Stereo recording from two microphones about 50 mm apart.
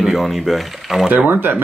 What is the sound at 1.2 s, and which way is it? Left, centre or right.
Speech, right.